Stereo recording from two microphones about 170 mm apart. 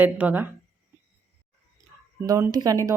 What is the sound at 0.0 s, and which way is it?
Speech, 10° right (ahead or behind).